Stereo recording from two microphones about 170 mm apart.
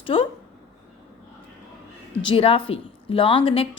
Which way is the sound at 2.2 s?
35° left (ahead or behind).